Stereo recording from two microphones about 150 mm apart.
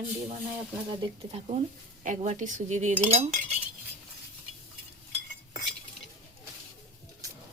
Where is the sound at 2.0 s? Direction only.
55° right (ahead or behind).